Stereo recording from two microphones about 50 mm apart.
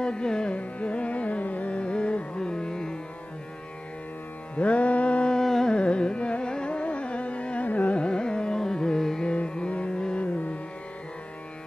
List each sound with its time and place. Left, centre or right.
0.0 s music: centre
0.6 s carnatic music: left
4.6 s music: left
5.4 s carnatic music: centre
5.8 s carnatic music: left
9.3 s music: left